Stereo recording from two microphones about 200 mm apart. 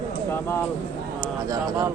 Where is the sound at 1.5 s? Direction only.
20° right (ahead or behind).